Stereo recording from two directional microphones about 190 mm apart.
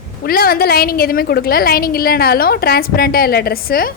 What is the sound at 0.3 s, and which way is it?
A woman's voice, 50° left (ahead or behind).